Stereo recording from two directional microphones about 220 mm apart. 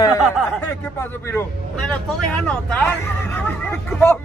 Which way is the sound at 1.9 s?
5° left (ahead or behind).